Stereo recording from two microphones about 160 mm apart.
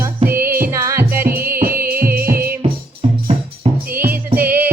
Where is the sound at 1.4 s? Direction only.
65° right (ahead or behind).